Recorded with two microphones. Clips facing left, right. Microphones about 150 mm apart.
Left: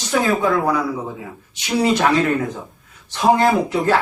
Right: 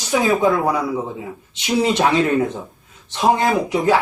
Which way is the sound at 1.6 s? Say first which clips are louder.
Even; 20° right (ahead or behind).